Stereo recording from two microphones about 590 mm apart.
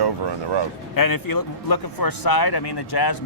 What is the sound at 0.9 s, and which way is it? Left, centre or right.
A man's voice, left.